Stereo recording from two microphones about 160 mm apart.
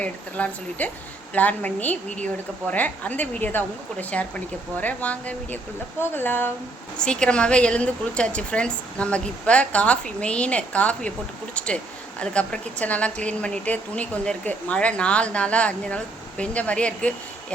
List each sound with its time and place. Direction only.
0.0 s a woman's voice: 10° left (ahead or behind)